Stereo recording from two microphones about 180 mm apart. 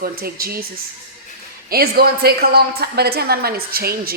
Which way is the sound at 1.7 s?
60° right (ahead or behind).